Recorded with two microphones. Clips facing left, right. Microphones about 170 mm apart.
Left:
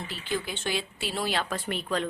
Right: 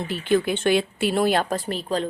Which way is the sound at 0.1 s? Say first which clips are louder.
Right 12 dB; 60° right (ahead or behind).